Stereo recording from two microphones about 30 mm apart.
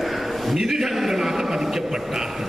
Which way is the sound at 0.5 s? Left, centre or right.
Centre.